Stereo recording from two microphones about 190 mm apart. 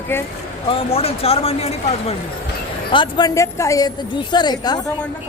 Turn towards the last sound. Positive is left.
turn(degrees=20)  # may be behind; listen again after turning